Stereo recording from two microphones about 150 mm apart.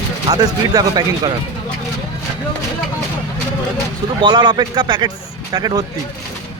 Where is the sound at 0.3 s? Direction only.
25° right (ahead or behind).